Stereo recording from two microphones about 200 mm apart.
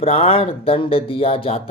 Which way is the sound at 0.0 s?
30° left (ahead or behind).